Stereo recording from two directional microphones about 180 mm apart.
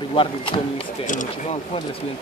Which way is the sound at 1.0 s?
45° left (ahead or behind).